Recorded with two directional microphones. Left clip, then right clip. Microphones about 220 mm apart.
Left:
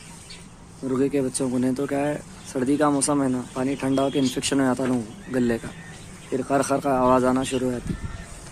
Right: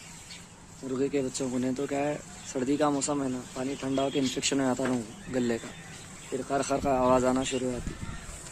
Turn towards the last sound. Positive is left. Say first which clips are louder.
# left 5 dB
turn(degrees=0)  # may be behind; listen again after turning